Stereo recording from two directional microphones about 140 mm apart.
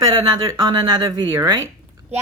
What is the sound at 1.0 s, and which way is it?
Speech, 20° right (ahead or behind).